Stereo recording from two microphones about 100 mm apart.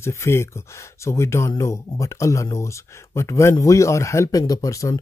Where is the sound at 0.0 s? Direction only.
25° left (ahead or behind).